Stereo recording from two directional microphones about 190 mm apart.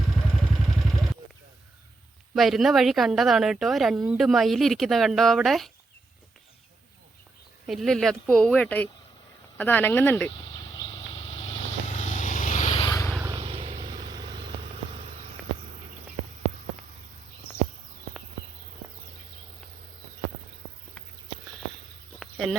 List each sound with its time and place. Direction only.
0.3 s vehicle: centre (ahead or behind)
2.3 s speech: centre (ahead or behind)
7.7 s speech: centre (ahead or behind)
10.6 s vehicle: 25° left (ahead or behind)
12.8 s vehicle: 15° left (ahead or behind)
13.3 s vehicle: 30° right (ahead or behind)
22.2 s insect: centre (ahead or behind)